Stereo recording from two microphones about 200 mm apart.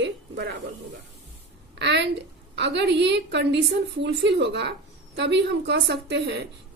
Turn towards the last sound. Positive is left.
turn(degrees=-60)  # may be behind; listen again after turning